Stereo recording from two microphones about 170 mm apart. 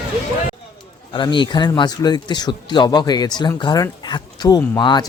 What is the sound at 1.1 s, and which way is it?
A man's voice, 30° left (ahead or behind).